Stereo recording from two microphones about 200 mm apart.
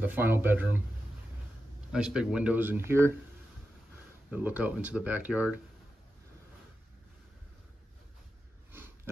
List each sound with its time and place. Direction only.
0.0 s speech: 10° right (ahead or behind)
1.9 s speech: 5° right (ahead or behind)
4.3 s speech: 10° right (ahead or behind)
8.7 s a sound: 10° right (ahead or behind)